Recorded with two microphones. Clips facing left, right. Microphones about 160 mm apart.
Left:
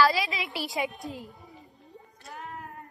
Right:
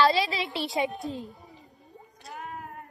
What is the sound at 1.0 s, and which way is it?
Speech, 20° right (ahead or behind).